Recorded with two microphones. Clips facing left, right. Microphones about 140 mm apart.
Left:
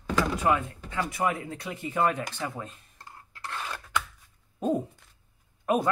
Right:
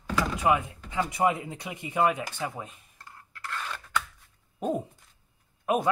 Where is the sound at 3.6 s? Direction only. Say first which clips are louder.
Even; 15° left (ahead or behind).